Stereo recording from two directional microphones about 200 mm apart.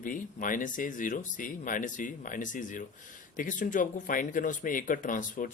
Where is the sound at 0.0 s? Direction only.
40° left (ahead or behind).